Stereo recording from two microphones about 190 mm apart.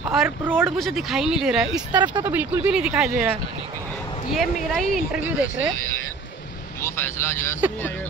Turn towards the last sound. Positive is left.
turn(degrees=15)  # may be behind; listen again after turning